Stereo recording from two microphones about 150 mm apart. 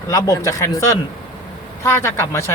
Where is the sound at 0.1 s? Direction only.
25° left (ahead or behind).